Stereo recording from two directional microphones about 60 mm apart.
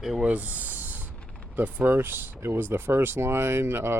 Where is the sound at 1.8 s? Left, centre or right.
Right.